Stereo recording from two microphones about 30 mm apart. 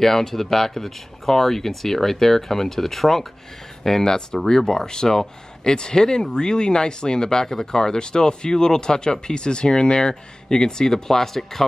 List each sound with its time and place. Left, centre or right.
0.0 s speech: centre